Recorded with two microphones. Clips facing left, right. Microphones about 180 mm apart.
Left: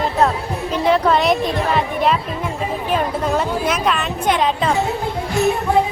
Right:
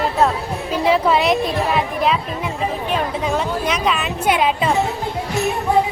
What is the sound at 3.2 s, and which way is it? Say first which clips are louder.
A woman's voice: left 1 dB; centre (ahead or behind).